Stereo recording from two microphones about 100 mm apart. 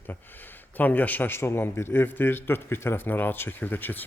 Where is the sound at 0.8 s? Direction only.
15° left (ahead or behind).